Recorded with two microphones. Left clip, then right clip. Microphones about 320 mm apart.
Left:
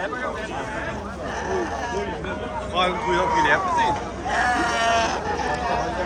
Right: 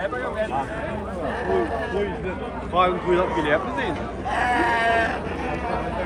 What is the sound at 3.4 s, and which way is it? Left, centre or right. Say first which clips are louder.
Vehicle: left 3 dB; right.